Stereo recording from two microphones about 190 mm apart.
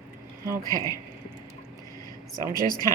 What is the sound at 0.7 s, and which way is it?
Speech, 20° left (ahead or behind).